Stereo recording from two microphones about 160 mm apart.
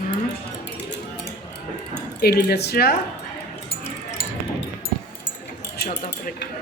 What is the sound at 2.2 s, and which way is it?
Speech, 85° left.